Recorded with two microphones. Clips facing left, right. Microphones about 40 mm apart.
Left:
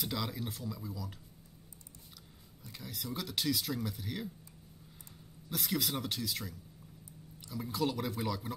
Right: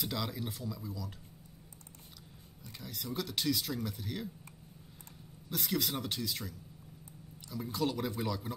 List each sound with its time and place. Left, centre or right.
0.0 s speech: centre
2.7 s speech: centre
5.5 s speech: centre